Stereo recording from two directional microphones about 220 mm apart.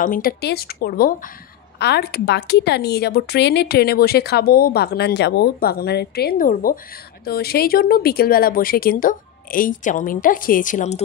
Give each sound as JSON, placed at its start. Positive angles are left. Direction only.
{"t": 0.0, "sound": "speech", "side_deg": 40}